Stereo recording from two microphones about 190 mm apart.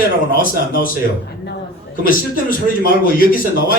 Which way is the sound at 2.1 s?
50° left (ahead or behind).